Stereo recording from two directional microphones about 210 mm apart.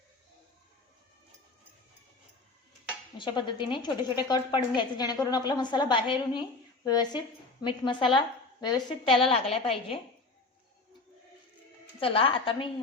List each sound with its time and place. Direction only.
3.2 s a woman's voice: 20° left (ahead or behind)
11.9 s a woman's voice: 25° left (ahead or behind)